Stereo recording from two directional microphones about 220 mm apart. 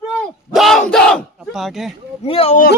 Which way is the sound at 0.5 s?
Centre (ahead or behind).